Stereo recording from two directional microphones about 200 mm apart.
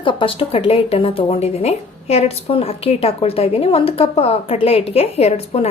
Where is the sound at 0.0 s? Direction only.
25° left (ahead or behind).